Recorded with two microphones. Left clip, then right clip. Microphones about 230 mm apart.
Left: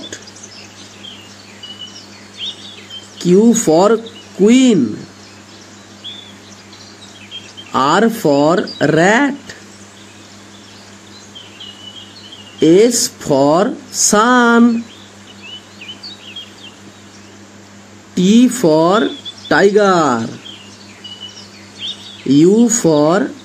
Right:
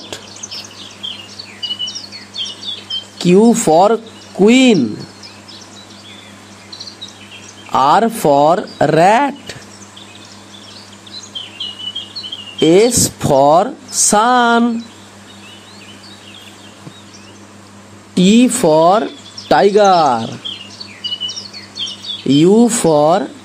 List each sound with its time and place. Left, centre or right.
2.4 s a sound: centre
3.2 s speech: centre
7.7 s speech: right
12.5 s speech: right
18.1 s speech: centre
21.8 s a sound: centre
22.3 s speech: centre